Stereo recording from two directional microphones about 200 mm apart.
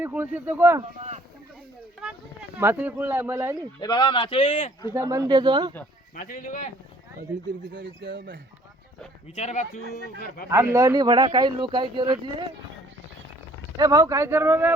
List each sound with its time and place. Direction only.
0.0 s speech: 10° right (ahead or behind)
2.6 s speech: 10° right (ahead or behind)
3.8 s speech: 20° left (ahead or behind)
4.9 s speech: 15° right (ahead or behind)
6.1 s speech: 45° left (ahead or behind)
7.7 s speech: 60° right (ahead or behind)
9.3 s speech: 35° left (ahead or behind)
9.9 s speech: 50° left (ahead or behind)
10.5 s speech: 15° right (ahead or behind)
13.7 s speech: 15° right (ahead or behind)